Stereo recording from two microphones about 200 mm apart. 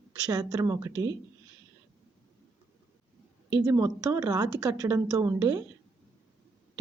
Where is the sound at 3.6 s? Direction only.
15° right (ahead or behind).